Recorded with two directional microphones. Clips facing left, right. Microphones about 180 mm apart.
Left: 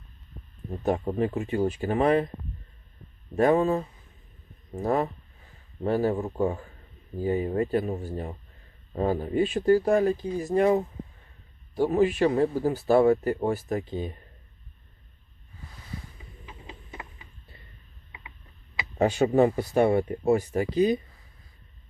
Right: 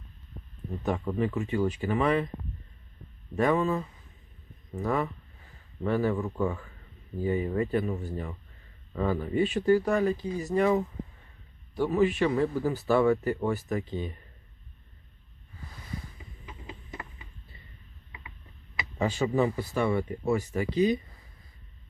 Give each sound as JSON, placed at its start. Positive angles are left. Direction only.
{"t": 0.7, "sound": "speech", "side_deg": 40}
{"t": 3.3, "sound": "speech", "side_deg": 40}
{"t": 18.9, "sound": "speech", "side_deg": 65}